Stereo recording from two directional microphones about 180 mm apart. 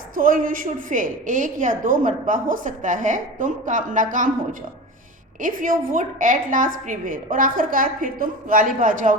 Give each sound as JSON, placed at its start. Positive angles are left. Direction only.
{"t": 0.1, "sound": "a woman's voice", "side_deg": -50}
{"t": 5.4, "sound": "a woman's voice", "side_deg": -50}